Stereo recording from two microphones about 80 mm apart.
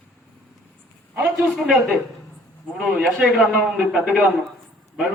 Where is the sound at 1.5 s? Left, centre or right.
Centre.